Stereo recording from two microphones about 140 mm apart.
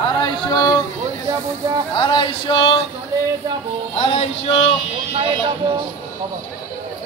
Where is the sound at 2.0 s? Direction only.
35° left (ahead or behind).